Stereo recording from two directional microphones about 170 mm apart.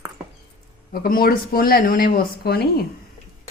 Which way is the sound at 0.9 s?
60° left (ahead or behind).